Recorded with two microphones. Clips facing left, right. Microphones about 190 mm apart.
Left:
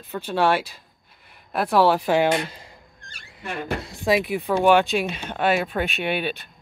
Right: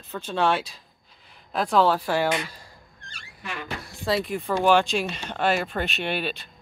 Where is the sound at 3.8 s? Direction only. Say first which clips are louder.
Left 3 dB; 15° left (ahead or behind).